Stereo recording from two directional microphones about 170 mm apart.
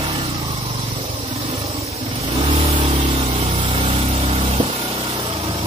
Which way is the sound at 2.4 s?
35° right (ahead or behind).